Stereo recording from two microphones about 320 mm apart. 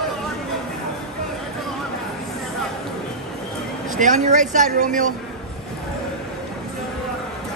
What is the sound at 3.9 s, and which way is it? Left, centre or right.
Speech, right.